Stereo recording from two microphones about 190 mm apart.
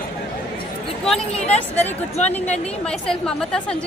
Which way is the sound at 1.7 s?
35° left (ahead or behind).